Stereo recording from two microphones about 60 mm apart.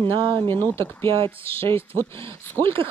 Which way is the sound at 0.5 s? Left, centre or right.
Left.